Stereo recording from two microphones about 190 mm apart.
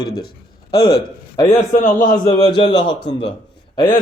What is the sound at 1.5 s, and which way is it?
Speech, 40° left (ahead or behind).